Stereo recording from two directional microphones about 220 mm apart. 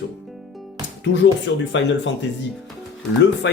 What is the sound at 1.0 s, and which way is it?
Speech, 55° left (ahead or behind).